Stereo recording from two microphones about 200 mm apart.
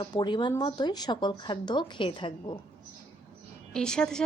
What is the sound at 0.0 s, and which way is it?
A woman's voice, 20° left (ahead or behind).